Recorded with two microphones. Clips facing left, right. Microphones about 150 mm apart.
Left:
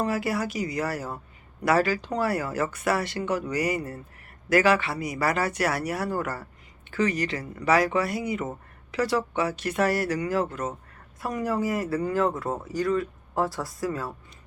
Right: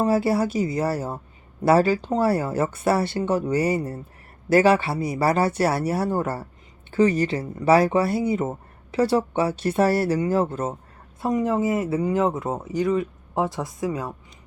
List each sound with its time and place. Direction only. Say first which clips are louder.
0.0 s speech: right 6 dB; 30° right (ahead or behind)